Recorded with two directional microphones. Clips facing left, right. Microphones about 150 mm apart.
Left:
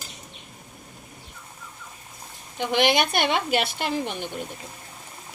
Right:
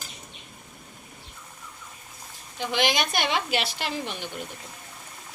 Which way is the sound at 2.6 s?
55° left (ahead or behind).